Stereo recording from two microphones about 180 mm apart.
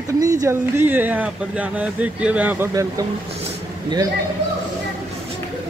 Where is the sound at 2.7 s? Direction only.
20° right (ahead or behind).